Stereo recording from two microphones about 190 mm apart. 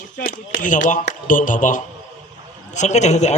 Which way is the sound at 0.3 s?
45° left (ahead or behind).